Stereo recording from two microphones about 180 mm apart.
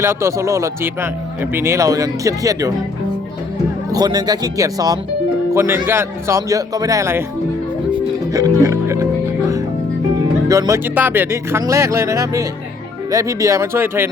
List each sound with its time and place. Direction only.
0.0 s speech: 15° right (ahead or behind)
3.9 s speech: 20° right (ahead or behind)
7.9 s music: 20° right (ahead or behind)
10.2 s speech: 20° right (ahead or behind)